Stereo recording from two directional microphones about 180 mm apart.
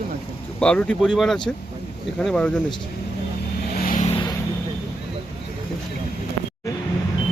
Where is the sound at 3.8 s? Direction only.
50° left (ahead or behind).